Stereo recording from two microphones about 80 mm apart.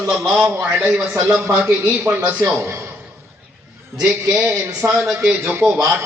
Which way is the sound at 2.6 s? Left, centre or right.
Right.